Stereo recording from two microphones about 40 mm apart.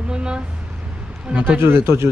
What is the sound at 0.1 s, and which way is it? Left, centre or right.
Vehicle, right.